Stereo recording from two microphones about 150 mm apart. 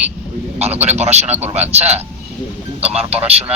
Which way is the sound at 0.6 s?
45° right (ahead or behind).